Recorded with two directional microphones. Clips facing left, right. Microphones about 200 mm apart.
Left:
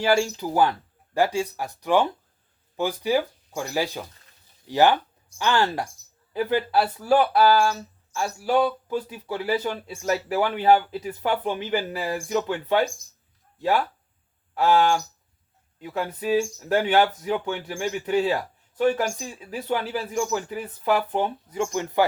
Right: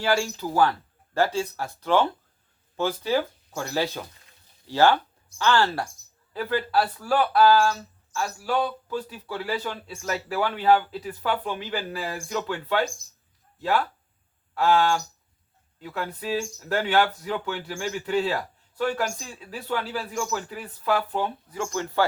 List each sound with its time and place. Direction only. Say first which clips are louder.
0.0 s speech: left 3 dB; 20° left (ahead or behind)
14.5 s speech: left 2 dB; 20° left (ahead or behind)